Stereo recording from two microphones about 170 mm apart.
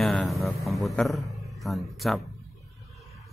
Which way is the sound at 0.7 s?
Centre (ahead or behind).